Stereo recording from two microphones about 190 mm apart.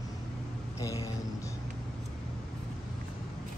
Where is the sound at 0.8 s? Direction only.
15° left (ahead or behind).